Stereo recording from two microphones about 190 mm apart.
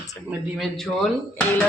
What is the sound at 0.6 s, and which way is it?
Speech, centre (ahead or behind).